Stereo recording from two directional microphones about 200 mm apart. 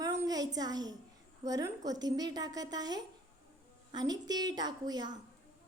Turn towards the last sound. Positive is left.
turn(degrees=-20)  # may be behind; listen again after turning